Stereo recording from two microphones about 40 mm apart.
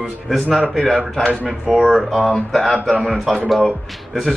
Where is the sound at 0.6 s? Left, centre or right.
Centre.